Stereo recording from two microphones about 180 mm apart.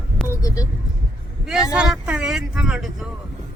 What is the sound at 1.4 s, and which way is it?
Speech, 5° right (ahead or behind).